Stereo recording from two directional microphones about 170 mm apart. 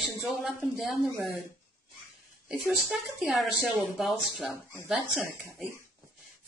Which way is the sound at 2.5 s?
Centre (ahead or behind).